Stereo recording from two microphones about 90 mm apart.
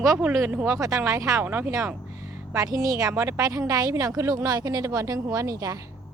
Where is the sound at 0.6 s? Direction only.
35° right (ahead or behind).